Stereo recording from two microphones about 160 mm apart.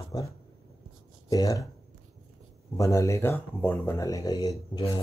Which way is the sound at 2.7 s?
20° left (ahead or behind).